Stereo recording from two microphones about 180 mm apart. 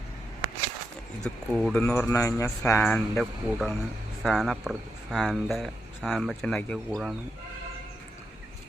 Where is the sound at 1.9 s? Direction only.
15° left (ahead or behind).